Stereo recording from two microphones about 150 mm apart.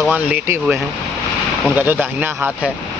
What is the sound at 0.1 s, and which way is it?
Speech, 10° right (ahead or behind).